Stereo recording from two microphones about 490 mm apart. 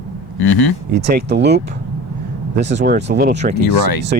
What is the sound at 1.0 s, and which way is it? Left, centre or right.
Speech, centre.